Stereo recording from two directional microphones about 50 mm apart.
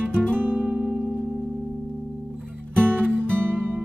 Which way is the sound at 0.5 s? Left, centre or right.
Right.